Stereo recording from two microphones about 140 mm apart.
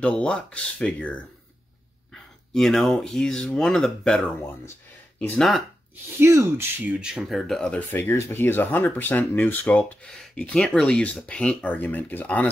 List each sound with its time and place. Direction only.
0.0 s speech: 5° left (ahead or behind)
6.1 s speech: 20° right (ahead or behind)
7.0 s speech: 5° right (ahead or behind)